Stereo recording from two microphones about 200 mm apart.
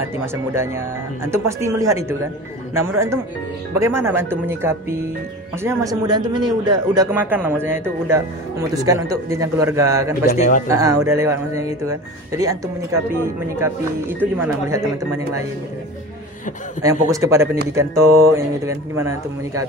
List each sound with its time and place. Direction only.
0.2 s speech: 10° right (ahead or behind)
3.8 s a man's voice: 15° right (ahead or behind)
7.1 s speech: 10° right (ahead or behind)
10.3 s speech: 35° left (ahead or behind)
10.7 s speech: 15° right (ahead or behind)
16.8 s speech: 15° right (ahead or behind)